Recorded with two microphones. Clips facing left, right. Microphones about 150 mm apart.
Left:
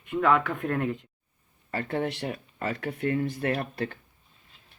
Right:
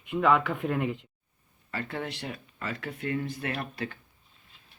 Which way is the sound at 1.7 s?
40° left (ahead or behind).